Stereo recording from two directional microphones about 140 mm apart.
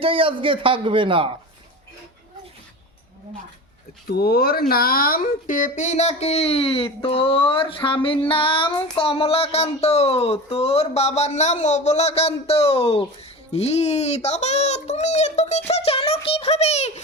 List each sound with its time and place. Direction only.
0.0 s a man's voice: 40° right (ahead or behind)
4.1 s a child's voice: 90° left; by 8.2 s 40° left (ahead or behind)
8.3 s child singing: 40° left (ahead or behind)
8.7 s a child's voice: 35° left (ahead or behind); by 16.9 s 50° left (ahead or behind)